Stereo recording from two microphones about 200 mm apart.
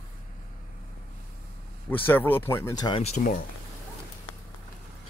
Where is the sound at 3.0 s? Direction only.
35° left (ahead or behind).